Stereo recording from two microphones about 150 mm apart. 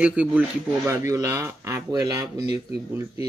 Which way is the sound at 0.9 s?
20° right (ahead or behind).